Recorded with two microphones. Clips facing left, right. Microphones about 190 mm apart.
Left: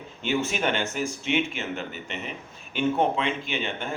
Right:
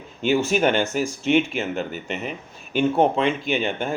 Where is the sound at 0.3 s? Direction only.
40° right (ahead or behind).